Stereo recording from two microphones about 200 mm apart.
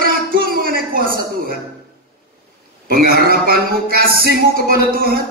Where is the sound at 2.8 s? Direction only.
50° right (ahead or behind).